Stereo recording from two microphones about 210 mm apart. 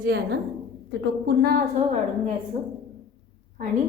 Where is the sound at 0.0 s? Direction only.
50° right (ahead or behind).